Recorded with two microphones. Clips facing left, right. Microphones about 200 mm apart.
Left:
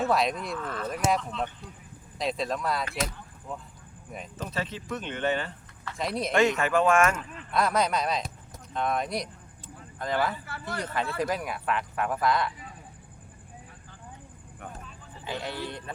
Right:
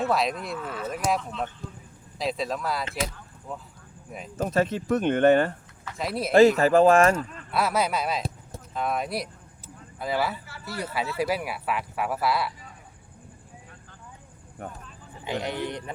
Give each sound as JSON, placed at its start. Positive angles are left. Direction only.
{"t": 0.0, "sound": "speech", "side_deg": 0}
{"t": 4.4, "sound": "speech", "side_deg": -45}
{"t": 6.0, "sound": "speech", "side_deg": -5}
{"t": 6.6, "sound": "speech", "side_deg": -35}
{"t": 7.5, "sound": "speech", "side_deg": -5}
{"t": 10.4, "sound": "speech", "side_deg": 55}
{"t": 10.8, "sound": "speech", "side_deg": -10}
{"t": 14.6, "sound": "speech", "side_deg": -40}
{"t": 15.2, "sound": "speech", "side_deg": -15}